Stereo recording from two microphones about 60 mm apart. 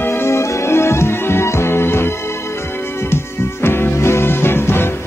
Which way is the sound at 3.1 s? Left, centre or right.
Left.